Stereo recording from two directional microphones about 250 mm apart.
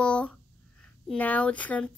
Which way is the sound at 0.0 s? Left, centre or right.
Centre.